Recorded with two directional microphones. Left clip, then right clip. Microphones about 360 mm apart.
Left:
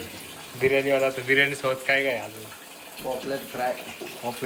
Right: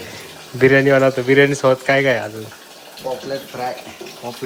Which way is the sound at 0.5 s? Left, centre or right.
Right.